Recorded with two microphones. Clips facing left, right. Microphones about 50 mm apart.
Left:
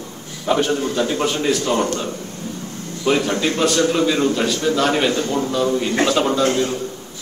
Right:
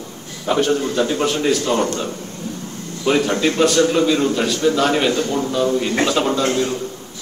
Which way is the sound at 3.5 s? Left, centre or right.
Centre.